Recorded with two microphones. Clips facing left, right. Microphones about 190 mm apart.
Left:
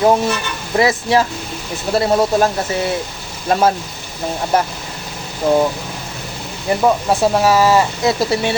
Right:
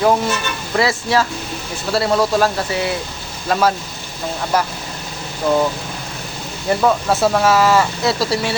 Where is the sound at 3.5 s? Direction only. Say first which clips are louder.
Left 2 dB; 25° left (ahead or behind).